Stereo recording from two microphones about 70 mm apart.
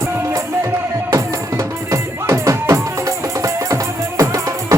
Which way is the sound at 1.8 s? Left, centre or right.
Right.